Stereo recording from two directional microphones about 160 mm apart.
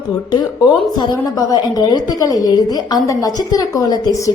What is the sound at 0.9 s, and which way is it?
A woman's voice, 25° left (ahead or behind).